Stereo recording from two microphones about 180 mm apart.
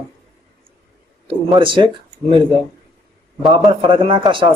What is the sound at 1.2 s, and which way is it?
Speech, 30° right (ahead or behind).